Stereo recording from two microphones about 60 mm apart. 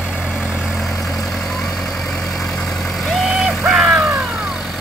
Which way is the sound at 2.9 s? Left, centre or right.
Centre.